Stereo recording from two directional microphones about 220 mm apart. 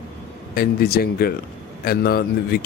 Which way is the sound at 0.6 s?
45° left (ahead or behind).